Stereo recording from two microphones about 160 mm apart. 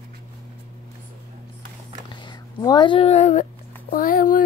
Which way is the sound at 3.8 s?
60° left (ahead or behind).